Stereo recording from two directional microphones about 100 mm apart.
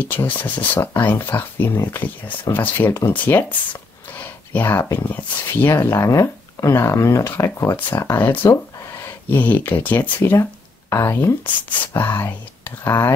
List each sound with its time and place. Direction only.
0.0 s speech: 20° left (ahead or behind)
4.1 s a sound: 15° left (ahead or behind)
4.9 s speech: 20° left (ahead or behind)
8.2 s speech: 15° left (ahead or behind)
9.0 s a sound: 15° left (ahead or behind)
9.8 s speech: 20° left (ahead or behind)